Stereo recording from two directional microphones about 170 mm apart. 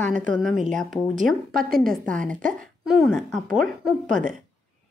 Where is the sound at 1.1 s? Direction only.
55° right (ahead or behind).